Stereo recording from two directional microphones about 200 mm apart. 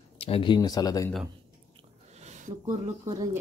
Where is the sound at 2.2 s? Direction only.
35° right (ahead or behind).